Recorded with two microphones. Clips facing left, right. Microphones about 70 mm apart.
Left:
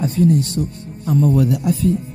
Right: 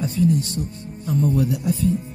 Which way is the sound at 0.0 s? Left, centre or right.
Left.